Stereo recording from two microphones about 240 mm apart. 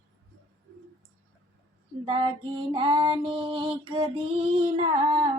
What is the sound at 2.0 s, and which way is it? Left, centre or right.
Female singing, centre.